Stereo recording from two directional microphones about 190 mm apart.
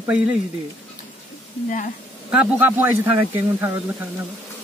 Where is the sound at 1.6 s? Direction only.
45° left (ahead or behind).